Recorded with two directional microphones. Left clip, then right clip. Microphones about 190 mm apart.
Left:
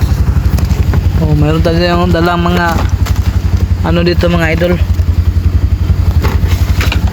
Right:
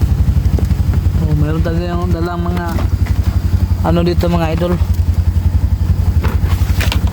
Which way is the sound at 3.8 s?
10° right (ahead or behind).